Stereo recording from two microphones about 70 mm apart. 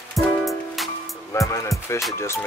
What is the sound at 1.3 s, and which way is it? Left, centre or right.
Speech, left.